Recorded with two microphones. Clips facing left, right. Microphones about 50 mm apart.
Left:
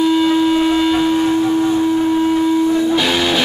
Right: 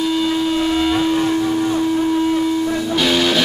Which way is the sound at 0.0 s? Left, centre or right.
Centre.